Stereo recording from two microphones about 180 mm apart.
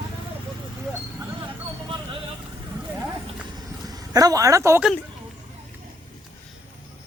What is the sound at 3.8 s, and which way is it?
Speech, 20° right (ahead or behind).